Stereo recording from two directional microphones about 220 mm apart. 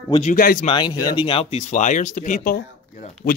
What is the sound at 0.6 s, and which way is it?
Speech, 20° left (ahead or behind).